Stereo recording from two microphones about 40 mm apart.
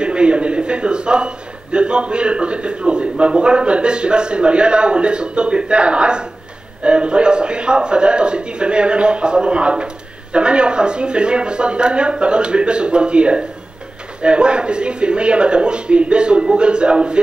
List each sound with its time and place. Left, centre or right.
0.0 s a man's voice: right